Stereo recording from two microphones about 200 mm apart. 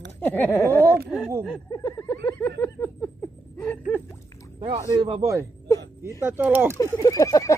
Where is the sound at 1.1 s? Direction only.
10° right (ahead or behind).